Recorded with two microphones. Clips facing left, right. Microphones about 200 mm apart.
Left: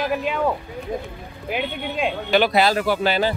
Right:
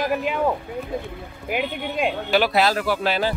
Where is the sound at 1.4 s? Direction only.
Centre (ahead or behind).